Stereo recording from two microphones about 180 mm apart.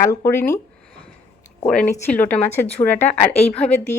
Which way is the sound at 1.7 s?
5° left (ahead or behind).